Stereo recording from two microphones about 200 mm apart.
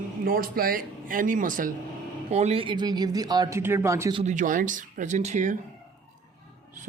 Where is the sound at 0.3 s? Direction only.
45° right (ahead or behind).